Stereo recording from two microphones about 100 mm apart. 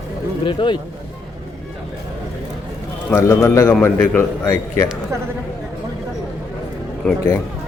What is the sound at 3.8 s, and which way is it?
Speech, 20° left (ahead or behind).